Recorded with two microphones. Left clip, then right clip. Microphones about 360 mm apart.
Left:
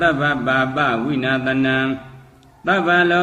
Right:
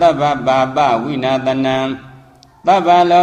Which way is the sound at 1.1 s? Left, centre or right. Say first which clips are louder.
Right 4 dB; centre.